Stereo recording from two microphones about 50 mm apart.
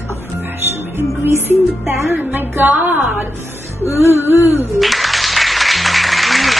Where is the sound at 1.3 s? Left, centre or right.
Right.